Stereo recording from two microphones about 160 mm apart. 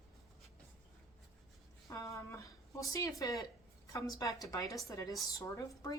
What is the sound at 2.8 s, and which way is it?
Speech, 20° left (ahead or behind).